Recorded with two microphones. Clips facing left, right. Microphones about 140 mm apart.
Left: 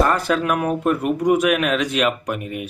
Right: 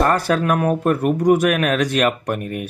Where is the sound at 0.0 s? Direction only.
40° right (ahead or behind).